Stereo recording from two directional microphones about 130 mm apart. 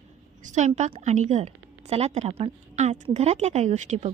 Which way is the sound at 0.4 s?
65° right (ahead or behind).